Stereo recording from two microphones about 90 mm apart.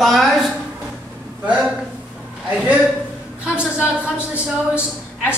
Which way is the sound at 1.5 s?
5° right (ahead or behind).